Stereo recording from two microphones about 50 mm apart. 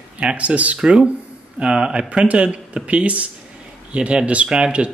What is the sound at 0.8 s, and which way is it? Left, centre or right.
Speech, centre.